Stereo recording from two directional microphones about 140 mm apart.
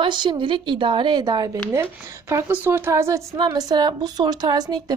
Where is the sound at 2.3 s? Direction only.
15° right (ahead or behind).